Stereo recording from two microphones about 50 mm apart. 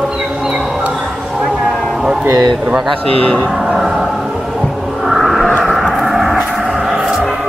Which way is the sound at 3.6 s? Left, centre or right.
Centre.